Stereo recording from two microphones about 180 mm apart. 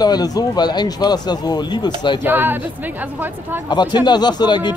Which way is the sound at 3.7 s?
25° left (ahead or behind).